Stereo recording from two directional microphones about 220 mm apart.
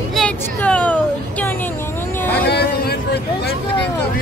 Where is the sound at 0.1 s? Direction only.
5° left (ahead or behind).